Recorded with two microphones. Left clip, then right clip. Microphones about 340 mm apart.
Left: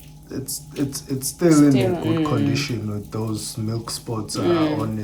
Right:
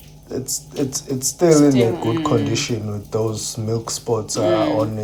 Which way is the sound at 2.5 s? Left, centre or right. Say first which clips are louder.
Right 2 dB; centre.